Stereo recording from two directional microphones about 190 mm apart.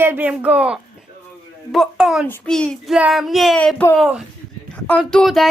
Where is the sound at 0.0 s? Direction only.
10° right (ahead or behind).